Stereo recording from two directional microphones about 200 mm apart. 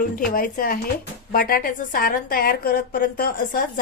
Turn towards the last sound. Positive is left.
turn(degrees=45)  # may be behind; listen again after turning